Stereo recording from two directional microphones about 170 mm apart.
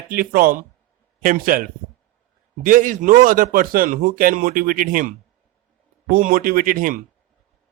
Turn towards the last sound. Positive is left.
turn(degrees=-55)  # may be behind; listen again after turning